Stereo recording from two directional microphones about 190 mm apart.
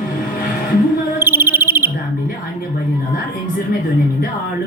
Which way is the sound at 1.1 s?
10° right (ahead or behind).